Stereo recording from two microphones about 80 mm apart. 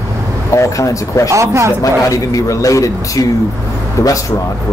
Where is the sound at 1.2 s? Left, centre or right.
Right.